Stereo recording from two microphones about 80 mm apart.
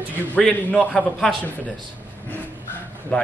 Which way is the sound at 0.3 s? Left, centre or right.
Centre.